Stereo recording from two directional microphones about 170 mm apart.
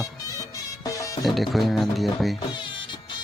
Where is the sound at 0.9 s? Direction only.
20° left (ahead or behind).